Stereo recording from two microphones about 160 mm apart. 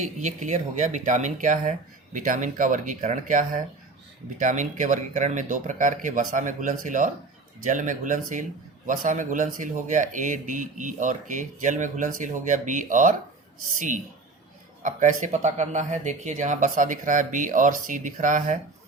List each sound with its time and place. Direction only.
0.0 s speech: 50° right (ahead or behind)